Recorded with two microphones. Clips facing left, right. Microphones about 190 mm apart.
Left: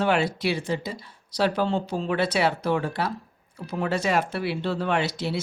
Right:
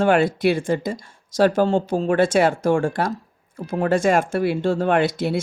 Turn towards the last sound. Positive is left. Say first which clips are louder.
# right 6 dB
turn(degrees=-50)  # may be behind; listen again after turning